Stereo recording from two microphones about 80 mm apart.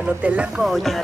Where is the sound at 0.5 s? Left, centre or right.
Centre.